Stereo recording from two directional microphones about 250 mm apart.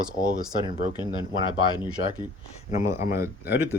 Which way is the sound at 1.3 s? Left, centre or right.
Centre.